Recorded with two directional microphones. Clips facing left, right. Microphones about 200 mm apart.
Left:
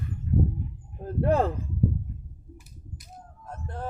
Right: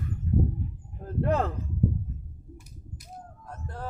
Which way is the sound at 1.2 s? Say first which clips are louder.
Left 3 dB; 30° left (ahead or behind).